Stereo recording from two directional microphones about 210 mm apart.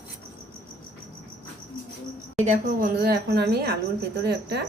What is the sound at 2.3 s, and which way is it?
A woman's voice, 35° right (ahead or behind).